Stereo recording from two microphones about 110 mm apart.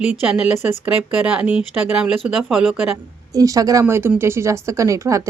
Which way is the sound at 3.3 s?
30° right (ahead or behind).